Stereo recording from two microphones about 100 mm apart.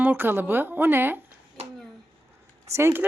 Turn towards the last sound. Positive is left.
turn(degrees=-25)  # may be behind; listen again after turning